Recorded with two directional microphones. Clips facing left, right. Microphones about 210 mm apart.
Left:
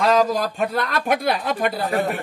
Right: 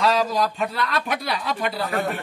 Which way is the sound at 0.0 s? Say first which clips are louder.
Left 3 dB; 50° left (ahead or behind).